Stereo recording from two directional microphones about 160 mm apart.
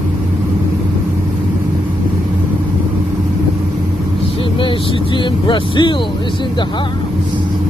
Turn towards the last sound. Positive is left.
turn(degrees=30)  # may be behind; listen again after turning